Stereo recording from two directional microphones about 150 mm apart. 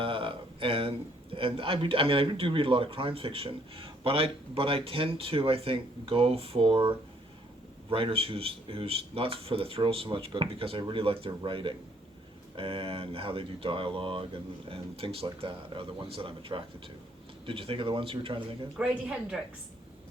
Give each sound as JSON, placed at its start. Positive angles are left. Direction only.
{"t": 0.0, "sound": "speech", "side_deg": -35}
{"t": 18.8, "sound": "speech", "side_deg": -5}